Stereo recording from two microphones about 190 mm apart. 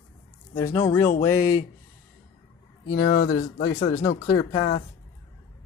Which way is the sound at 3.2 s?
90° left.